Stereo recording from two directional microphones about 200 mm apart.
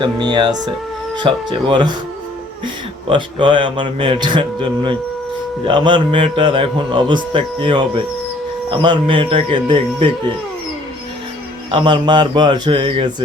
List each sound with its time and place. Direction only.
0.0 s a man's voice: 20° right (ahead or behind)
3.1 s a man's voice: 25° right (ahead or behind)
11.7 s a man's voice: 25° right (ahead or behind)